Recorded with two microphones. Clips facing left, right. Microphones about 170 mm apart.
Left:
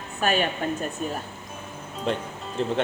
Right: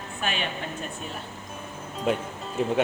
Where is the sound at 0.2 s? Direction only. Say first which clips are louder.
Left 7 dB; 45° left (ahead or behind).